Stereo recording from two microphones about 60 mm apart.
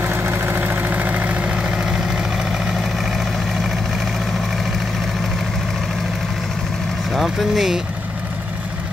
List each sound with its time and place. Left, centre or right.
0.0 s vehicle: right; by 2.6 s centre
7.2 s speech: centre